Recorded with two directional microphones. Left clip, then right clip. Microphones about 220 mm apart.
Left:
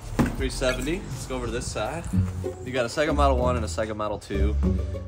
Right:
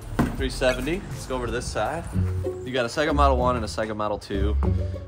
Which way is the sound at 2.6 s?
Centre (ahead or behind).